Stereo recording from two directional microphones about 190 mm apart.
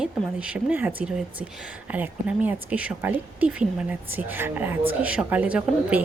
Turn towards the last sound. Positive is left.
turn(degrees=-5)  # may be behind; listen again after turning